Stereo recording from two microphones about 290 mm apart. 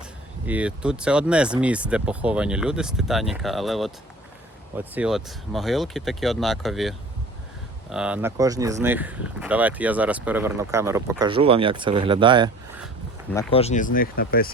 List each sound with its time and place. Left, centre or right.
0.4 s speech: centre
13.5 s speech: left